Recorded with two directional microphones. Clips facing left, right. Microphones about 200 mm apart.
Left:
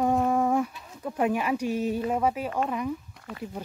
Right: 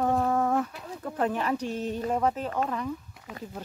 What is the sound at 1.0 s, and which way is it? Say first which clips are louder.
Speech: left 2 dB; 10° left (ahead or behind).